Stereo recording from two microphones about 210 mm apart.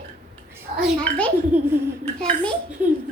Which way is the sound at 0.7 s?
35° right (ahead or behind).